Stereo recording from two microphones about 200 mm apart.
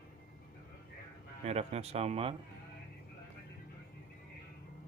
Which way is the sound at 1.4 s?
30° right (ahead or behind).